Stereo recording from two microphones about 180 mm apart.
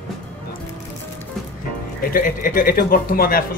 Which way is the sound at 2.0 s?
50° left (ahead or behind).